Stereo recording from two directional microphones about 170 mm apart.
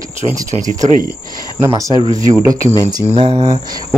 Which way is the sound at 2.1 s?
20° right (ahead or behind).